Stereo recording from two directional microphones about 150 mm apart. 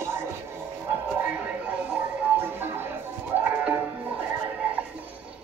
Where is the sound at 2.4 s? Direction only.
15° right (ahead or behind).